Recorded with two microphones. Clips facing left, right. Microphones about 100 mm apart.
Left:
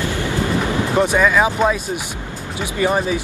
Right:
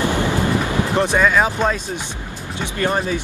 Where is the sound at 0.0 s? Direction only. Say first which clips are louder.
Right 2 dB; 20° right (ahead or behind).